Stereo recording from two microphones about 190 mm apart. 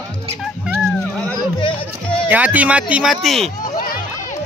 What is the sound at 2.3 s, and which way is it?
Speech, 10° right (ahead or behind).